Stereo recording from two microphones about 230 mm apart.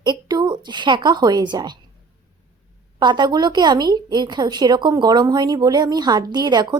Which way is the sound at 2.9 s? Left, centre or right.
Centre.